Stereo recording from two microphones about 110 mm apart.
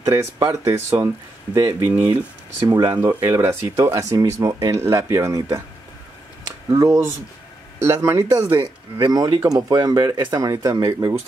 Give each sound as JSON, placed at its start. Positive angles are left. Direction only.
{"t": 0.0, "sound": "speech", "side_deg": -30}
{"t": 1.9, "sound": "speech", "side_deg": -20}
{"t": 2.6, "sound": "speech", "side_deg": -30}
{"t": 6.7, "sound": "speech", "side_deg": -25}
{"t": 8.9, "sound": "speech", "side_deg": -40}